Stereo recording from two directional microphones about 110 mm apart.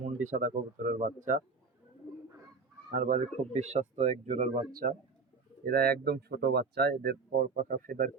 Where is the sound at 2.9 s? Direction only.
90° right.